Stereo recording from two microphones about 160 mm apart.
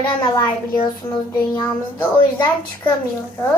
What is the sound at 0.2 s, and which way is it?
Speech, 30° left (ahead or behind).